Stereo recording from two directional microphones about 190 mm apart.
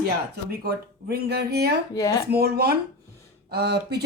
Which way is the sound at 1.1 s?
60° right (ahead or behind).